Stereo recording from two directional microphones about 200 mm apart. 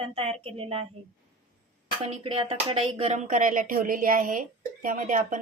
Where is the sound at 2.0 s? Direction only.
25° right (ahead or behind).